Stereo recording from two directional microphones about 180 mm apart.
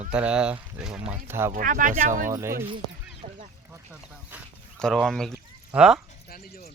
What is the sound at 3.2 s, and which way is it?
Goose, 40° right (ahead or behind).